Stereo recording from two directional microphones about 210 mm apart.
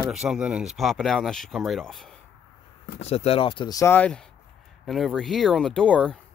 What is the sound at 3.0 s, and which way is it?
Speech, 30° left (ahead or behind).